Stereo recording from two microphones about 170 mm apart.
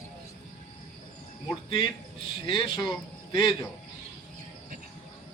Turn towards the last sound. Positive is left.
turn(degrees=25)  # may be behind; listen again after turning